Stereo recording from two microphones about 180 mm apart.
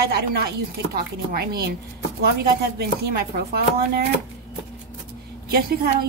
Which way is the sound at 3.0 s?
60° right (ahead or behind).